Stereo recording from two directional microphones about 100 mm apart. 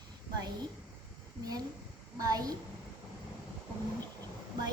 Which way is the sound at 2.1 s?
40° right (ahead or behind).